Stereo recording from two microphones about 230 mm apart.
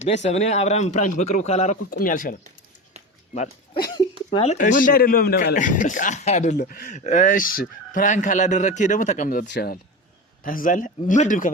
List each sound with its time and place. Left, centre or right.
0.0 s speech: left
4.3 s a man's voice: left
9.5 s a man's voice: left